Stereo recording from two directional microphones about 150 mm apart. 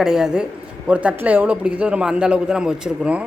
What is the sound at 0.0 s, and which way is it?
A man's voice, 5° right (ahead or behind).